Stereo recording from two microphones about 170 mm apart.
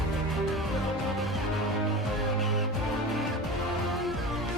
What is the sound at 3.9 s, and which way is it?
Music, centre (ahead or behind).